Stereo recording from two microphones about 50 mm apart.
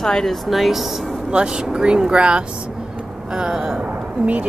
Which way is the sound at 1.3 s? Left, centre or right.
Centre.